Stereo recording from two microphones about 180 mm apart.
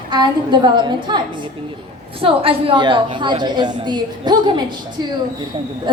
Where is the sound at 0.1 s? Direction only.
25° right (ahead or behind).